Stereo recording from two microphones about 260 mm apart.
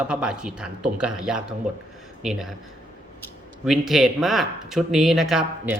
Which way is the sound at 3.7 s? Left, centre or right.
Centre.